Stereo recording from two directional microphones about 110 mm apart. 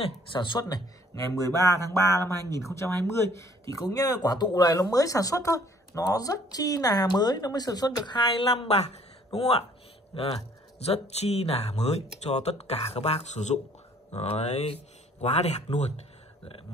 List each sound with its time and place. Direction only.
0.3 s a man's voice: 45° left (ahead or behind)
10.9 s speech: 70° left (ahead or behind); by 13.6 s 90° left
14.1 s speech: 75° left (ahead or behind)